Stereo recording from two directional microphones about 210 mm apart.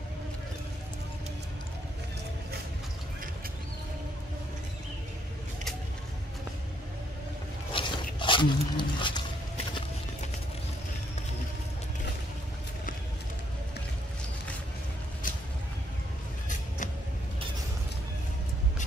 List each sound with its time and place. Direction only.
7.7 s dog: 25° left (ahead or behind)